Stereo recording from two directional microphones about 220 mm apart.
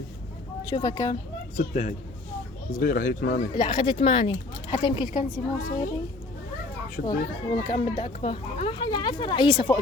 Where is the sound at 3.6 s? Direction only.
20° left (ahead or behind).